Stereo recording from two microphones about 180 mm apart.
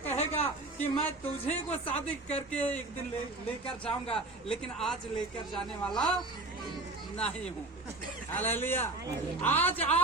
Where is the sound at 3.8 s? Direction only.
5° left (ahead or behind).